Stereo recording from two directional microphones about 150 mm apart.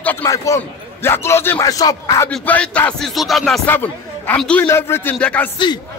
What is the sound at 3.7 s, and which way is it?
A man's voice, 10° left (ahead or behind).